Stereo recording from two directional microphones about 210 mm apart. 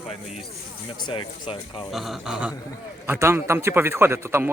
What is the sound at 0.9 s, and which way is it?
Speech, 20° left (ahead or behind).